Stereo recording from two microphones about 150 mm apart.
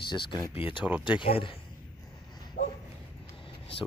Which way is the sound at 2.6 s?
65° left (ahead or behind).